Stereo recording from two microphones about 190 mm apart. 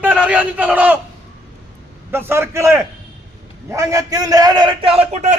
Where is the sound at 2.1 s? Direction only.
10° right (ahead or behind).